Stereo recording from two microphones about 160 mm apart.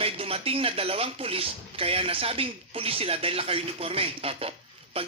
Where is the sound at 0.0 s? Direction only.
35° right (ahead or behind).